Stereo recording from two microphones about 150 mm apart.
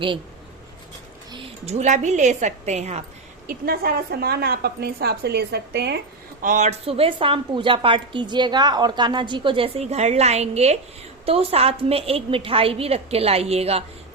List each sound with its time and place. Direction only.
1.6 s a woman's voice: 50° right (ahead or behind)
3.4 s a woman's voice: 75° right (ahead or behind)
6.4 s a woman's voice: 55° right (ahead or behind)